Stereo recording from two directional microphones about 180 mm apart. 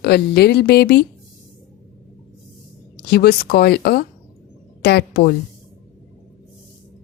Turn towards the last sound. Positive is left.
turn(degrees=60)  # may be behind; listen again after turning